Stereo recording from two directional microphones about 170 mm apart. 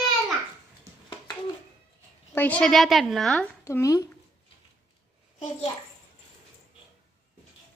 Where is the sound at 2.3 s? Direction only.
10° left (ahead or behind).